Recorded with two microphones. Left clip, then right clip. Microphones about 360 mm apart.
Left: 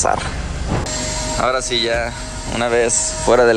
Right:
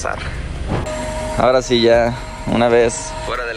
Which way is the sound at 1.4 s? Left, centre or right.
Centre.